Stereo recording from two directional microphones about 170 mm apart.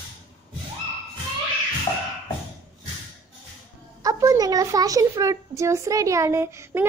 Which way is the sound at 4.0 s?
20° right (ahead or behind).